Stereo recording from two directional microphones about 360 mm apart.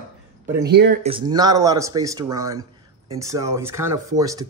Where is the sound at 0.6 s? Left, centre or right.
Right.